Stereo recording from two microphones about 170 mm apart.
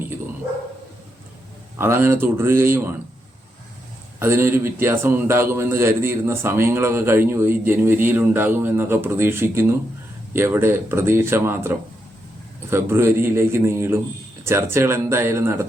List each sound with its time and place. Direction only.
1.8 s a man's voice: 15° right (ahead or behind)
4.2 s a man's voice: 15° right (ahead or behind)
12.7 s a man's voice: 15° right (ahead or behind)